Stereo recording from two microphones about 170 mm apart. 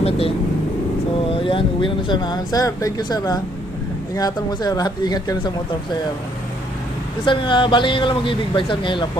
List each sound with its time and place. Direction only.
0.0 s speech: 35° left (ahead or behind)
7.3 s speech: 30° left (ahead or behind)